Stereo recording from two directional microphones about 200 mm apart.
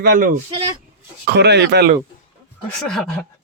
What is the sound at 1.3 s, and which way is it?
Speech, 55° right (ahead or behind).